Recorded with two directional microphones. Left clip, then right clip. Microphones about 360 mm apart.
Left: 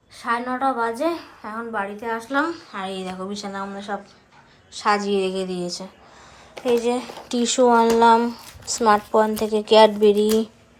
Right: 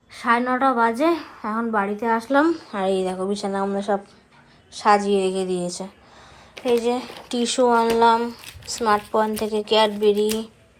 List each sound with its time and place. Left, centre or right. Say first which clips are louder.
0.1 s a woman's voice: right 4 dB; centre